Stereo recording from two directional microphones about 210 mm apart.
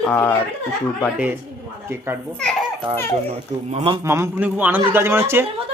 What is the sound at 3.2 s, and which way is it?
Speech, 30° right (ahead or behind).